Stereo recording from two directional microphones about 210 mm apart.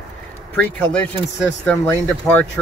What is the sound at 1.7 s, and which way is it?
Speech, 5° left (ahead or behind).